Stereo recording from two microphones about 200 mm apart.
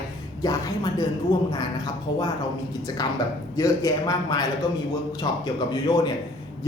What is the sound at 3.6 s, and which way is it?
Speech, 20° left (ahead or behind).